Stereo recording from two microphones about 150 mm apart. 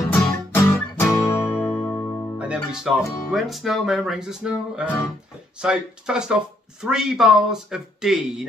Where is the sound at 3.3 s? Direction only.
Centre (ahead or behind).